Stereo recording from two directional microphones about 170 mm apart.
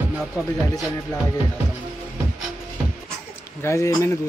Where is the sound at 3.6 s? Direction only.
15° left (ahead or behind).